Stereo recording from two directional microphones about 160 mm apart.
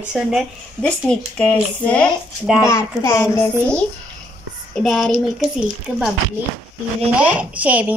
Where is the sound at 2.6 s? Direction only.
15° left (ahead or behind).